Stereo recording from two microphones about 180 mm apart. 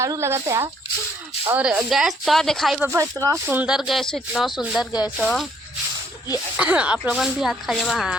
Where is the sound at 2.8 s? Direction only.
15° right (ahead or behind).